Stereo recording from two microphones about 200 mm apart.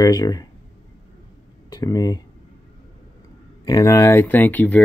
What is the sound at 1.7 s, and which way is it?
Speech, 20° left (ahead or behind).